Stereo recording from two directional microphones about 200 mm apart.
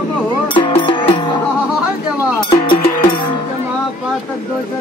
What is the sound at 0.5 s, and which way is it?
Insect, 25° left (ahead or behind).